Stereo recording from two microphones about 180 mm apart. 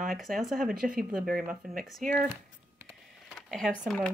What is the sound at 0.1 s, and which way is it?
Speech, centre (ahead or behind).